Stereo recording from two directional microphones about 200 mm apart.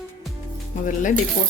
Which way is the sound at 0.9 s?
40° left (ahead or behind).